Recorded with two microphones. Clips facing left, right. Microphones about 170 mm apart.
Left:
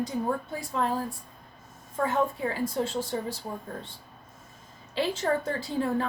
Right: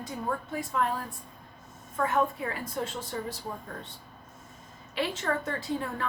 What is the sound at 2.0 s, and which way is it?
A woman's voice, 30° left (ahead or behind).